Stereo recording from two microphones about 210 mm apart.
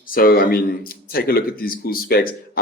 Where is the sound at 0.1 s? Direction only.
45° left (ahead or behind).